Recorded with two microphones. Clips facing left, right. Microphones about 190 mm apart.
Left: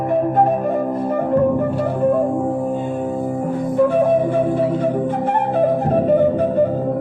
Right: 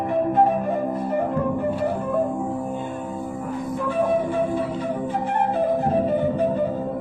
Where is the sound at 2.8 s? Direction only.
55° left (ahead or behind).